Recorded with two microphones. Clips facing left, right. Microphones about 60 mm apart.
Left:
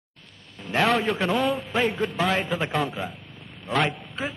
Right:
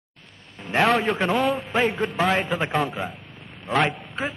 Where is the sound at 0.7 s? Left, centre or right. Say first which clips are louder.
Right 2 dB; right.